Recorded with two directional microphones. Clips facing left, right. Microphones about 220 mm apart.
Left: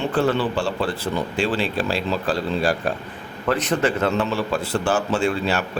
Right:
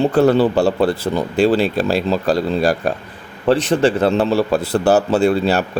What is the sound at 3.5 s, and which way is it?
Speech, 30° right (ahead or behind).